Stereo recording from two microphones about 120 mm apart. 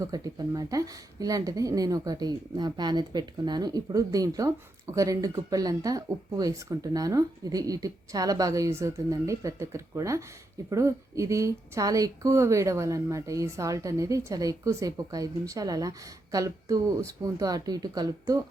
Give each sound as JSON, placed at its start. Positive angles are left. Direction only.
{"t": 0.0, "sound": "speech", "side_deg": -30}